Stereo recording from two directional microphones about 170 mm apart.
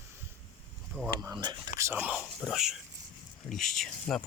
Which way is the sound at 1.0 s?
10° right (ahead or behind).